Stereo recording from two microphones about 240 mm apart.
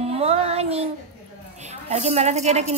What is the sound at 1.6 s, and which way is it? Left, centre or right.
A woman's voice, right.